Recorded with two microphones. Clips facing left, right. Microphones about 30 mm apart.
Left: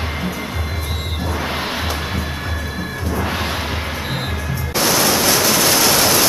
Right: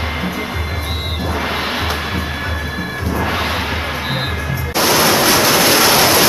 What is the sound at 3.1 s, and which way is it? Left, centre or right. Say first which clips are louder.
Music: right 3 dB; centre.